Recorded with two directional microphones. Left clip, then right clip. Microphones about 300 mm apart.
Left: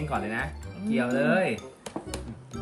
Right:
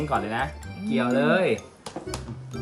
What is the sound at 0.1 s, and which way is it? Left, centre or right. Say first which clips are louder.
Speech: right 3 dB; centre.